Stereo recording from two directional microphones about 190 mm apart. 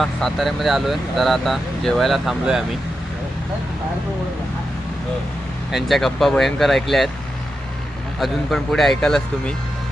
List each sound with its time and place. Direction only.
0.0 s speech: centre (ahead or behind)
5.7 s speech: centre (ahead or behind)
8.2 s speech: centre (ahead or behind)